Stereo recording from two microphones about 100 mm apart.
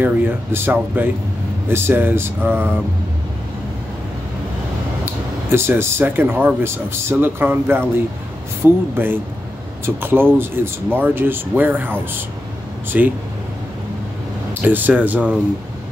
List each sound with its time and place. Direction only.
0.0 s speech: 20° right (ahead or behind)
5.5 s speech: 25° right (ahead or behind)
8.9 s speech: 20° right (ahead or behind)
14.5 s speech: 20° right (ahead or behind)